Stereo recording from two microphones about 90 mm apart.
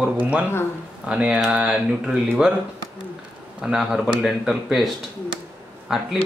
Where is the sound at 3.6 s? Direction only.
5° right (ahead or behind).